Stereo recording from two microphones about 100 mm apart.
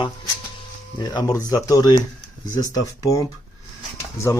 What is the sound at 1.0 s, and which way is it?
Speech, 40° left (ahead or behind).